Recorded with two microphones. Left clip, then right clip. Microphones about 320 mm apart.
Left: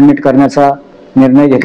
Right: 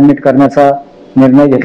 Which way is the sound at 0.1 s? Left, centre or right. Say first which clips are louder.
Right 1 dB; left.